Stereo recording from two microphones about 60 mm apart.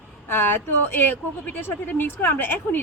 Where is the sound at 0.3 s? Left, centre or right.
Left.